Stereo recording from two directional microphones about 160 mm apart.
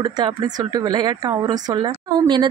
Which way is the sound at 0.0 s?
25° right (ahead or behind).